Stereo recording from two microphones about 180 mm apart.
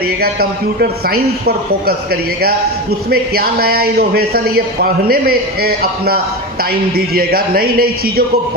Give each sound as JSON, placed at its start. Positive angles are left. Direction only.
{"t": 0.2, "sound": "a man's voice", "side_deg": -60}
{"t": 3.1, "sound": "a man's voice", "side_deg": -55}